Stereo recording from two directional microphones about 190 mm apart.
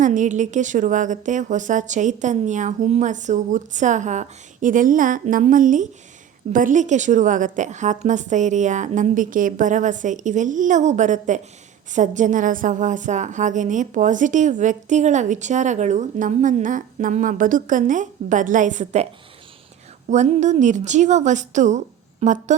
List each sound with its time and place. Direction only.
0.0 s a woman's voice: 40° right (ahead or behind)
20.1 s a woman's voice: 40° right (ahead or behind)